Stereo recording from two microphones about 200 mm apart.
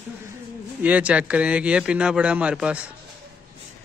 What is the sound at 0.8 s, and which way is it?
A man's voice, 5° right (ahead or behind).